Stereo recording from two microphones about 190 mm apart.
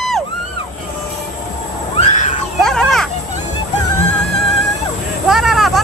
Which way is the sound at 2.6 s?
Centre (ahead or behind).